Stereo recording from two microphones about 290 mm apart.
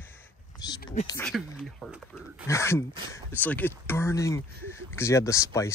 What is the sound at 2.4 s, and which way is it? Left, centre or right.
Speech, centre.